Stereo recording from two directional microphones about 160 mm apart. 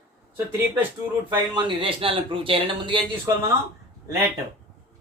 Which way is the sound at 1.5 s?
30° right (ahead or behind).